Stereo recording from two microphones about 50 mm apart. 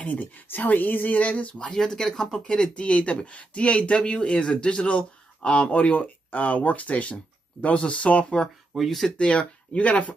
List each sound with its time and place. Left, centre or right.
0.1 s speech: left
1.7 s speech: centre; by 8.4 s left
8.7 s speech: centre
9.1 s speech: left